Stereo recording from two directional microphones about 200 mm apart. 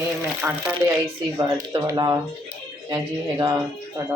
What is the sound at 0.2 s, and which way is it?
Speech, 10° right (ahead or behind).